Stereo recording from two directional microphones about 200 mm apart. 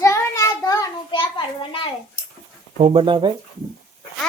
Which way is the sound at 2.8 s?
30° right (ahead or behind).